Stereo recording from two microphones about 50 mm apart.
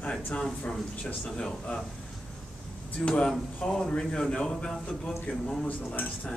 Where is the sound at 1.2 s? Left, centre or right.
Centre.